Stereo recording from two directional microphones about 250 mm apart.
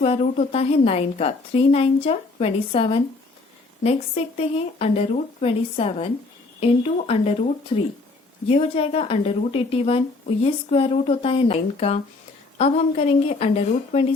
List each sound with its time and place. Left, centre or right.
0.0 s a woman's voice: left